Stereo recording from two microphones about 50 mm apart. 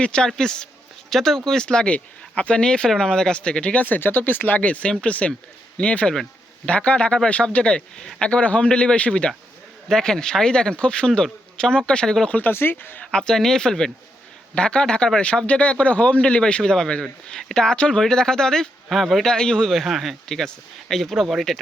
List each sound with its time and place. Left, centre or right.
0.0 s a man's voice: left
12.5 s speech: left
13.1 s speech: centre
19.8 s speech: centre
20.2 s speech: centre